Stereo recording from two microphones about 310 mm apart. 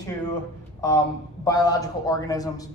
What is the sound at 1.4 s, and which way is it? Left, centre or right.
A man's voice, centre.